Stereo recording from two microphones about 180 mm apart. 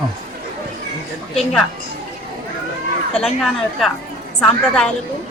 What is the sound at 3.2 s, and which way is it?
Speech, centre (ahead or behind).